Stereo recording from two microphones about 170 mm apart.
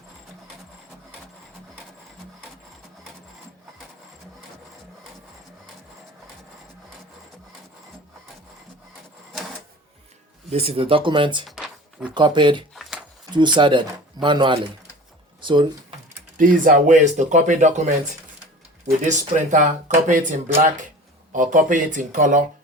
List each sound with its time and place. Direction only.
10.5 s speech: 35° right (ahead or behind)
11.4 s a sound: centre (ahead or behind)
12.1 s speech: 25° right (ahead or behind)
12.7 s a sound: centre (ahead or behind)
13.3 s speech: 25° right (ahead or behind)
16.4 s speech: 50° right (ahead or behind)
19.0 s speech: 45° right (ahead or behind)
21.3 s speech: 50° right (ahead or behind)